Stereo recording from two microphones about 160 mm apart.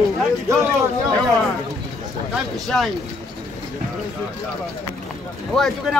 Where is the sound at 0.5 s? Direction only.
20° right (ahead or behind).